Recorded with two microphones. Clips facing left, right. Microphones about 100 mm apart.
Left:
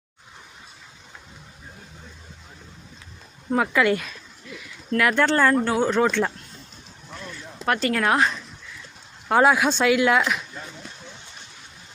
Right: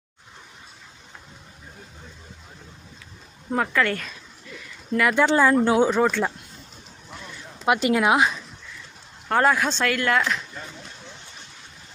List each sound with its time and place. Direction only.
3.5 s speech: 5° left (ahead or behind)
5.2 s speech: 10° right (ahead or behind)
7.1 s a sound: 10° right (ahead or behind)
9.3 s speech: 10° left (ahead or behind)